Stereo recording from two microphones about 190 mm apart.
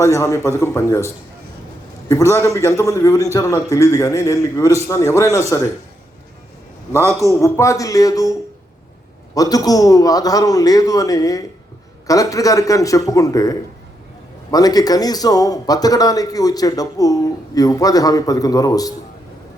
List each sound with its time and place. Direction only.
0.0 s a man's voice: 15° left (ahead or behind)
7.1 s a man's voice: 15° left (ahead or behind)